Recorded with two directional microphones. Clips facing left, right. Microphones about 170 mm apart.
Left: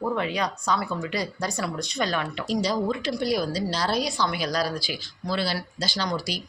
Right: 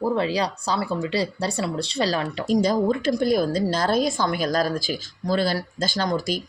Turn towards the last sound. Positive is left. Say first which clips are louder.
# right 5 dB
turn(degrees=-50)  # may be behind; listen again after turning